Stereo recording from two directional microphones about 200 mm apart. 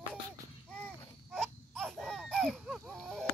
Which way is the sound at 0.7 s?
5° left (ahead or behind).